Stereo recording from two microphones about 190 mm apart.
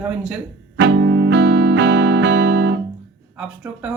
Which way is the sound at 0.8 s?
70° right (ahead or behind).